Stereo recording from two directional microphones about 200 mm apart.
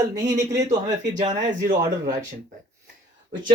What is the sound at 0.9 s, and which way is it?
Speech, 40° right (ahead or behind).